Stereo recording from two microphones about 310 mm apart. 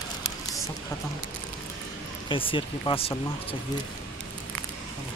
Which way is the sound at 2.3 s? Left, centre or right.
Centre.